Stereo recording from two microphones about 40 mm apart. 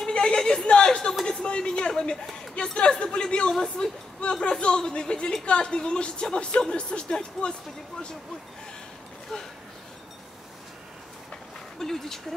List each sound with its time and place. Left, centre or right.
0.0 s a sound: left
0.7 s a woman's voice: left
9.3 s speech: centre
11.8 s speech: centre